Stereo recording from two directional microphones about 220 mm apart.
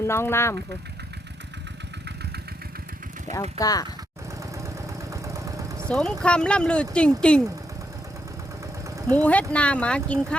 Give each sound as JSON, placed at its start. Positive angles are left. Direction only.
{"t": 0.0, "sound": "speech", "side_deg": 10}
{"t": 3.6, "sound": "speech", "side_deg": 15}
{"t": 5.1, "sound": "vehicle", "side_deg": -15}
{"t": 5.9, "sound": "speech", "side_deg": 5}
{"t": 9.1, "sound": "speech", "side_deg": 5}